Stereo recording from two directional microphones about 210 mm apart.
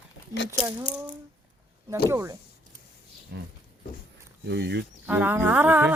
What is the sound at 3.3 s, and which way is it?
Speech, 55° right (ahead or behind).